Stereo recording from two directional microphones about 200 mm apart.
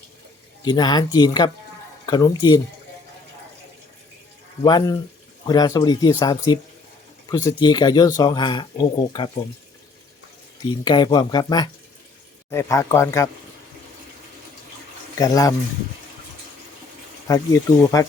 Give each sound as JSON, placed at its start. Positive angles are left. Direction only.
{"t": 0.6, "sound": "speech", "side_deg": 20}
{"t": 4.6, "sound": "speech", "side_deg": 20}
{"t": 10.7, "sound": "speech", "side_deg": 20}
{"t": 15.2, "sound": "speech", "side_deg": 15}
{"t": 17.2, "sound": "speech", "side_deg": 15}